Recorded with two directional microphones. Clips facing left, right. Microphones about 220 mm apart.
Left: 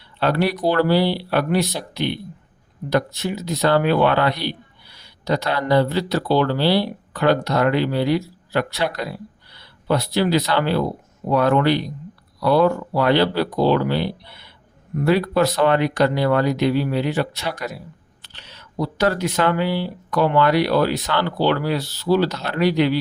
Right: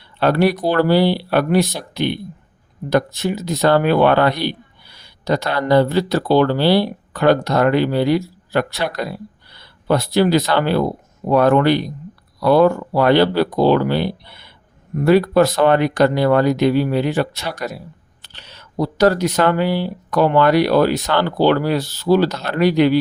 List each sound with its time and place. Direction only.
0.2 s speech: 50° right (ahead or behind)
9.8 s speech: 45° right (ahead or behind)